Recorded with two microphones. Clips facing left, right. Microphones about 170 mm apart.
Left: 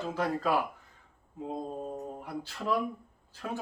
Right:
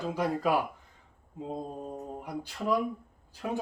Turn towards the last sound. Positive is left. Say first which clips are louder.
# right 4 dB
turn(degrees=-15)  # may be behind; listen again after turning